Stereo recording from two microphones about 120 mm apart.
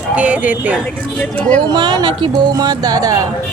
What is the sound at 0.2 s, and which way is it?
Speech, 10° right (ahead or behind).